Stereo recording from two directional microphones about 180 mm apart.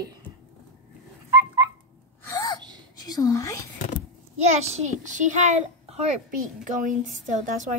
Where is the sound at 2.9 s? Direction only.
20° left (ahead or behind).